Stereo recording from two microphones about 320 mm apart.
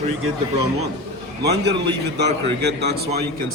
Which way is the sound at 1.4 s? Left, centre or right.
Right.